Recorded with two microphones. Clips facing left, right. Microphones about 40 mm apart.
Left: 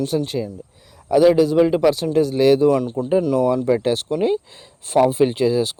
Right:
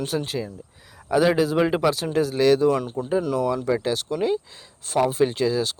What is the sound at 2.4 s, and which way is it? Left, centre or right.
Speech, centre.